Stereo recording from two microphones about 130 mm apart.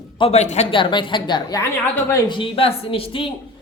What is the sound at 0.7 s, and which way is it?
A woman's voice, 40° left (ahead or behind).